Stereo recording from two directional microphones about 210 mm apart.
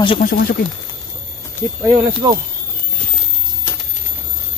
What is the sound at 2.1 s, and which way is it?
Speech, 20° right (ahead or behind).